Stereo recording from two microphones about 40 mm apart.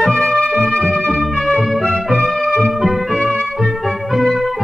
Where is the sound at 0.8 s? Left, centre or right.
Left.